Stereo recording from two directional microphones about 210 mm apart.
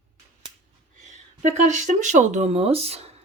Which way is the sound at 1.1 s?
35° right (ahead or behind).